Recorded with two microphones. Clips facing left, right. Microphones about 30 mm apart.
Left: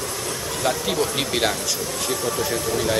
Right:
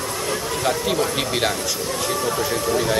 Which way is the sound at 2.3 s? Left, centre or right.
Centre.